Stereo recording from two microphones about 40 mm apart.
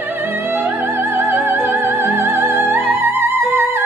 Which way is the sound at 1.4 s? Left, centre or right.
Right.